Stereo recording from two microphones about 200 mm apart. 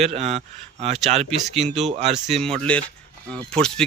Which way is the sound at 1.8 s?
35° right (ahead or behind).